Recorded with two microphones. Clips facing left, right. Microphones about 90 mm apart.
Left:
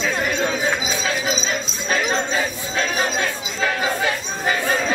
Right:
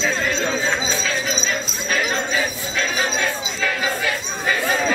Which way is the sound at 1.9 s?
25° left (ahead or behind).